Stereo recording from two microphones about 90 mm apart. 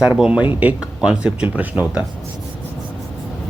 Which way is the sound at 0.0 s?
10° right (ahead or behind).